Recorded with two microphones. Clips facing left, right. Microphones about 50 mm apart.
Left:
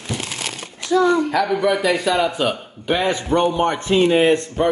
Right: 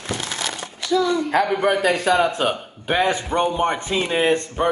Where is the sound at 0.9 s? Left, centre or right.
Left.